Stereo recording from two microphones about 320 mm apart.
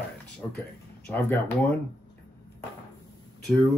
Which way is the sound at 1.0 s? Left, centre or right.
Centre.